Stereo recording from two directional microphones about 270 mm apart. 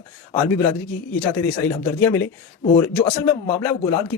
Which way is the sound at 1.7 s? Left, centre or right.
Centre.